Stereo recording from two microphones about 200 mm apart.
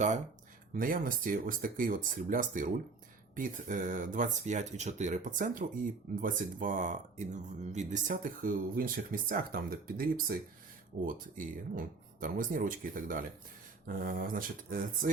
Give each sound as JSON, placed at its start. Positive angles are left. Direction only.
{"t": 0.7, "sound": "speech", "side_deg": -45}